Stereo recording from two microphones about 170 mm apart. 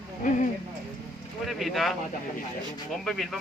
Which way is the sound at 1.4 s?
Centre (ahead or behind).